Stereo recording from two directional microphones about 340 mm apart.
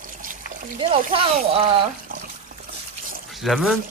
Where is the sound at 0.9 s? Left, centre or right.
Centre.